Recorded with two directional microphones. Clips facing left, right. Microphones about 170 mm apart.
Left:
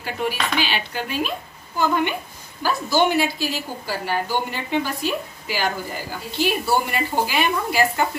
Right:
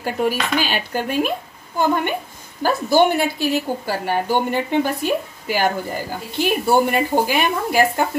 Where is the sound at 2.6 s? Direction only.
55° right (ahead or behind).